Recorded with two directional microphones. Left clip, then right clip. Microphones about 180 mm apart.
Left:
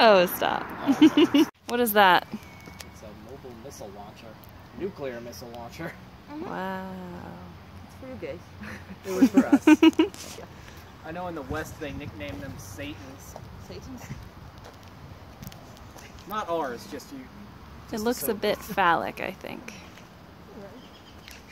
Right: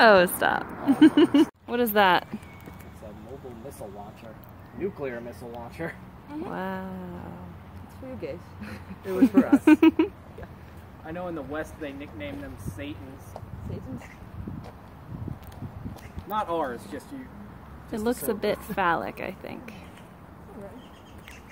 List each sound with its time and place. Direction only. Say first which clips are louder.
0.0 s speech: right 1 dB; 5° left (ahead or behind)
4.7 s speech: right 2 dB; 20° left (ahead or behind)
5.8 s speech: right 4 dB; 45° left (ahead or behind)
6.5 s a sound: left 1 dB; 5° left (ahead or behind)
8.2 s speech: even; 20° right (ahead or behind)
9.1 s speech: even; 10° left (ahead or behind)
11.1 s speech: even; 55° left (ahead or behind)
16.3 s speech: right 1 dB; 35° left (ahead or behind)
17.9 s speech: even; 5° left (ahead or behind)